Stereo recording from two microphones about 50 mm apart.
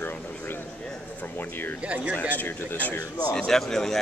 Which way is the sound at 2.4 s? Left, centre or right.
Left.